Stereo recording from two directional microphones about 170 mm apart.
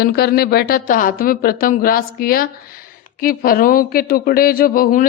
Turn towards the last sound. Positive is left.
turn(degrees=55)  # may be behind; listen again after turning